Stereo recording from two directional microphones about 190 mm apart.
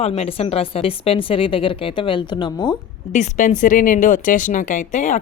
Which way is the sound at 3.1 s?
40° left (ahead or behind).